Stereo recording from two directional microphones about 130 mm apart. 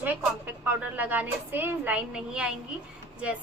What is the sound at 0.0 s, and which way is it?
A woman's voice, 15° right (ahead or behind).